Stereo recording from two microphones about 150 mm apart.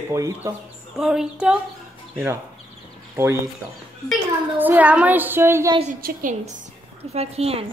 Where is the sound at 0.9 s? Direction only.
5° right (ahead or behind).